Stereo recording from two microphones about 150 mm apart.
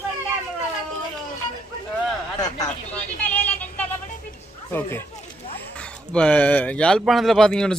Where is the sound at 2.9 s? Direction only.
10° left (ahead or behind).